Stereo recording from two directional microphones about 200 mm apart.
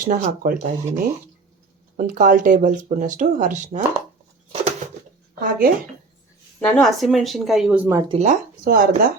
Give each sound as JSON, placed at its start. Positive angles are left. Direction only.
{"t": 0.0, "sound": "speech", "side_deg": -45}
{"t": 5.4, "sound": "speech", "side_deg": -45}
{"t": 6.6, "sound": "speech", "side_deg": 5}
{"t": 8.0, "sound": "speech", "side_deg": -25}
{"t": 8.3, "sound": "speech", "side_deg": -45}